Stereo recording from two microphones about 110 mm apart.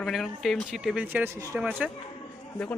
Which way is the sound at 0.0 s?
Centre (ahead or behind).